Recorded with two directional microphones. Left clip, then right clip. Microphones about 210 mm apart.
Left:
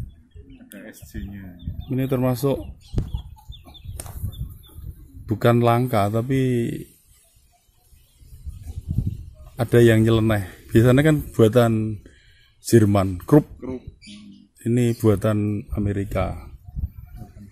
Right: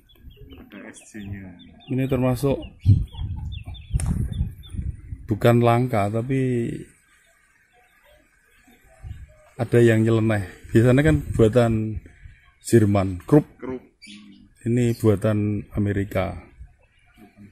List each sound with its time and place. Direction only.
0.8 s speech: 35° left (ahead or behind)
1.9 s a man's voice: centre (ahead or behind)
5.2 s a man's voice: 5° right (ahead or behind)
9.6 s a man's voice: 5° left (ahead or behind)
14.6 s a man's voice: 5° left (ahead or behind)